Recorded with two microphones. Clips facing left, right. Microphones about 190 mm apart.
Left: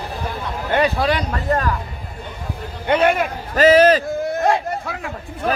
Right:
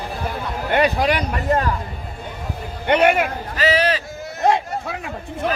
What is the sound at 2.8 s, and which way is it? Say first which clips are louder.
Speech: right 1 dB; 20° right (ahead or behind).